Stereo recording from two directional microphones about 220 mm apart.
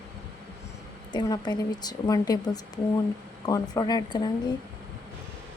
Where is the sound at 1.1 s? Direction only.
20° left (ahead or behind).